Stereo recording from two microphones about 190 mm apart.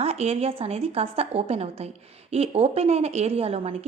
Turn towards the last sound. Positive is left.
turn(degrees=-35)  # may be behind; listen again after turning